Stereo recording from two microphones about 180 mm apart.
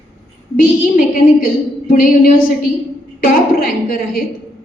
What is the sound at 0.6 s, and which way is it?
A woman's voice, 50° left (ahead or behind).